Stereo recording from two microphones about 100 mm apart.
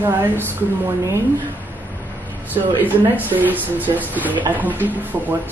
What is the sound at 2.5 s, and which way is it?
Speech, 20° right (ahead or behind).